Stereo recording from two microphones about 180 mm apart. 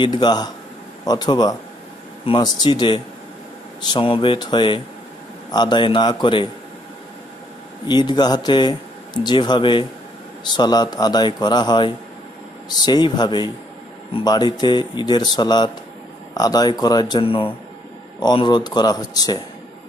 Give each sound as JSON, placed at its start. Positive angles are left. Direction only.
{"t": 0.0, "sound": "speech", "side_deg": 25}
{"t": 7.9, "sound": "speech", "side_deg": 25}